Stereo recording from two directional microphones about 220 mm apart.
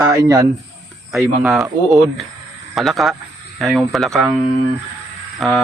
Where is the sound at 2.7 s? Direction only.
Centre (ahead or behind).